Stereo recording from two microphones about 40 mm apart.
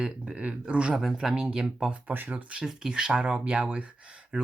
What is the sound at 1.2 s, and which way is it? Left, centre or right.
Speech, centre.